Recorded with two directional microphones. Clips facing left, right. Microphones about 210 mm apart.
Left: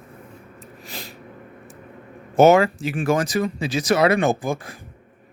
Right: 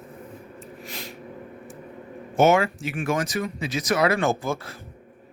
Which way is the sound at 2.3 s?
35° left (ahead or behind).